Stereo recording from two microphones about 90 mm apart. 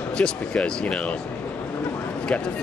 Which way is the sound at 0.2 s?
10° left (ahead or behind).